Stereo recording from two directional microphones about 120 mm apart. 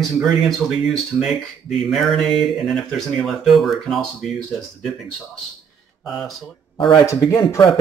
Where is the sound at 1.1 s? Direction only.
15° right (ahead or behind).